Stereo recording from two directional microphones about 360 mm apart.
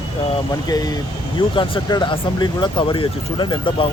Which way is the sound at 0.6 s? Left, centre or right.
Centre.